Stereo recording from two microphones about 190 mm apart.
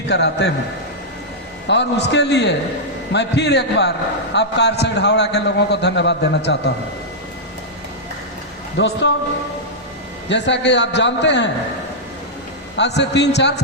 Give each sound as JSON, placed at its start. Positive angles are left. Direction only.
{"t": 0.1, "sound": "a man's voice", "side_deg": 65}
{"t": 1.6, "sound": "a man's voice", "side_deg": 65}
{"t": 8.8, "sound": "a man's voice", "side_deg": 70}
{"t": 10.2, "sound": "a man's voice", "side_deg": 70}
{"t": 13.0, "sound": "a man's voice", "side_deg": 65}